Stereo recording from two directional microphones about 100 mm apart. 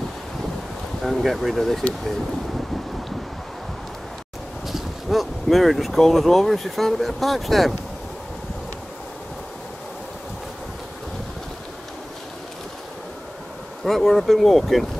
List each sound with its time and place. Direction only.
1.0 s speech: centre (ahead or behind)
4.6 s speech: centre (ahead or behind)
13.8 s speech: centre (ahead or behind)